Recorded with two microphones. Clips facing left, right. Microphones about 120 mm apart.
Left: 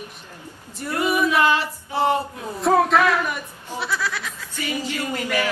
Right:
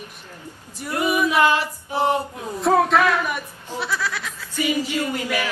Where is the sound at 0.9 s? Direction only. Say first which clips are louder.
Even; 15° right (ahead or behind).